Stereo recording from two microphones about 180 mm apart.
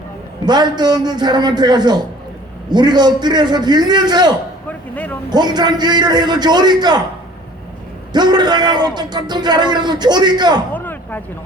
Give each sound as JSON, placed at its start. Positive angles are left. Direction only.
{"t": 0.4, "sound": "a man's voice", "side_deg": -25}
{"t": 8.1, "sound": "a man's voice", "side_deg": -25}
{"t": 10.8, "sound": "a sound", "side_deg": 10}